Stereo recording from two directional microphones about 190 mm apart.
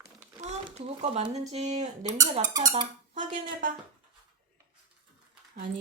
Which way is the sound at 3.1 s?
40° right (ahead or behind).